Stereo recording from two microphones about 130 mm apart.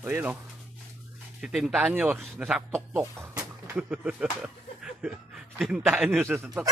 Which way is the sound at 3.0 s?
20° right (ahead or behind).